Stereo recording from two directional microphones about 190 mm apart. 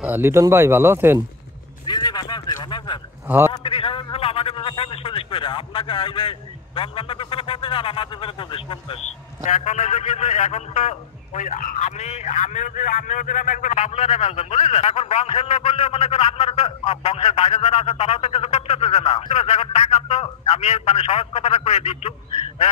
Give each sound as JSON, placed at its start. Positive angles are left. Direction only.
{"t": 0.0, "sound": "speech", "side_deg": -10}
{"t": 1.9, "sound": "a sound", "side_deg": 20}
{"t": 3.3, "sound": "speech", "side_deg": -10}
{"t": 3.5, "sound": "a man's voice", "side_deg": 30}
{"t": 9.4, "sound": "a man's voice", "side_deg": 40}